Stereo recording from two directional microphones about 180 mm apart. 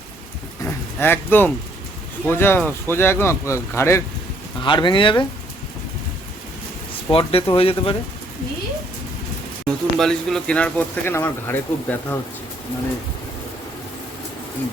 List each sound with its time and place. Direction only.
0.6 s a sound: 10° left (ahead or behind)
2.2 s speech: 10° left (ahead or behind)
4.6 s speech: 25° left (ahead or behind)
7.1 s speech: 30° left (ahead or behind)
9.6 s speech: 5° left (ahead or behind)